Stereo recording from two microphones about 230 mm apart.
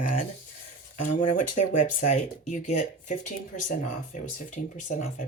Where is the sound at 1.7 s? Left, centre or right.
Left.